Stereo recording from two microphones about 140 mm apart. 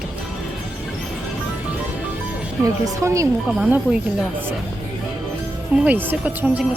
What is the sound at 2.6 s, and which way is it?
Speech, 20° right (ahead or behind).